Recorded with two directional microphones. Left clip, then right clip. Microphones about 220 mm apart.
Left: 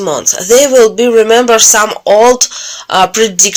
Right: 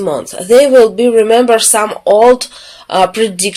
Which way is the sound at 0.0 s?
20° left (ahead or behind).